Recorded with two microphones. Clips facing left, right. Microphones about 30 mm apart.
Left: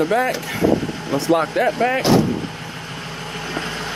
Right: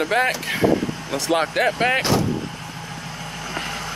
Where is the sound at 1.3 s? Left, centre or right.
Right.